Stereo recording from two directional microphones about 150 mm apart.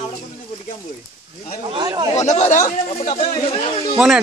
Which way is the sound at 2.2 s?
55° left (ahead or behind).